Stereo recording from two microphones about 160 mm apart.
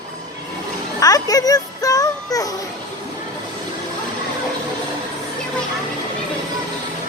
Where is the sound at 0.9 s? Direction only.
20° left (ahead or behind).